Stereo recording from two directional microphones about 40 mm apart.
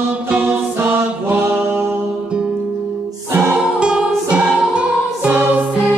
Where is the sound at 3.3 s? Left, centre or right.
Right.